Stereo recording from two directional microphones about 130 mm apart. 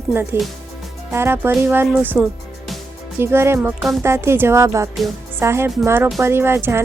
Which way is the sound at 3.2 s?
20° right (ahead or behind).